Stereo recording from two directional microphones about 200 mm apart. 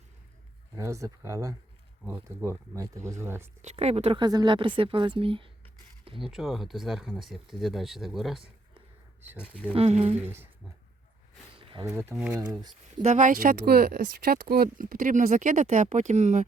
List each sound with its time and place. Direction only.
0.8 s speech: 15° right (ahead or behind)
3.6 s speech: 35° right (ahead or behind)
6.1 s speech: centre (ahead or behind)
9.4 s speech: 10° left (ahead or behind)
9.7 s speech: 30° right (ahead or behind)
10.2 s speech: 10° right (ahead or behind)
11.7 s speech: 20° right (ahead or behind)
13.0 s speech: 35° right (ahead or behind)